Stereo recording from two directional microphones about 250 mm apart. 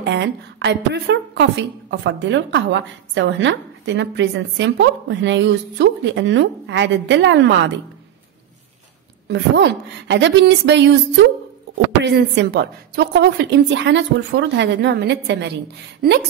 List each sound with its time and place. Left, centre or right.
0.0 s a woman's voice: right
9.3 s a woman's voice: right